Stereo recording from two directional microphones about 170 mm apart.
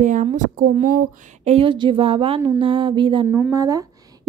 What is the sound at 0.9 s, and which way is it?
Speech, 40° right (ahead or behind).